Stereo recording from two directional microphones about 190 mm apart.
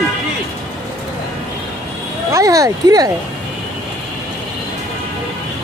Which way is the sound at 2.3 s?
20° right (ahead or behind).